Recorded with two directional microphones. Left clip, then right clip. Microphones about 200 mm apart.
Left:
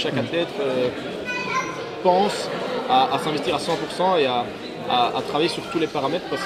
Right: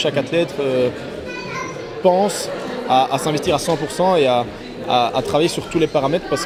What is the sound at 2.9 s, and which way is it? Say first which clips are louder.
Speech: right 3 dB; 30° right (ahead or behind).